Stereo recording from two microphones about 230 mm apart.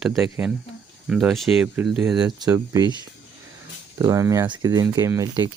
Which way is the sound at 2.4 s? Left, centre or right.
Centre.